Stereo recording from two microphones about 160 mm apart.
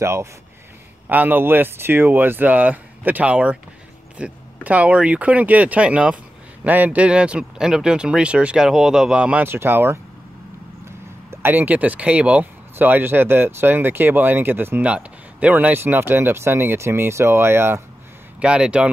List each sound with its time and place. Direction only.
0.0 s speech: 15° right (ahead or behind)
11.2 s speech: 15° right (ahead or behind)